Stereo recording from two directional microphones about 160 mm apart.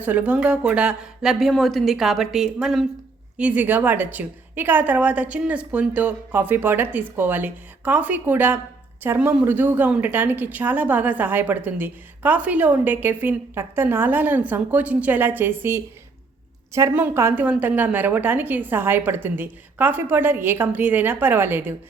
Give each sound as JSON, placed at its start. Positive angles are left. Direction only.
{"t": 0.0, "sound": "a woman's voice", "side_deg": -10}